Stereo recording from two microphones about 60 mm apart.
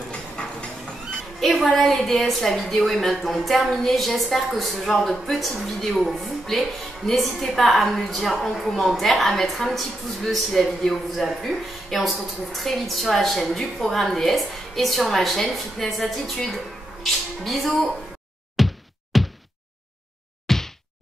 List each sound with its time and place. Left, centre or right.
0.1 s a sound: centre
1.4 s a woman's voice: centre
18.6 s whack: centre
20.4 s whack: centre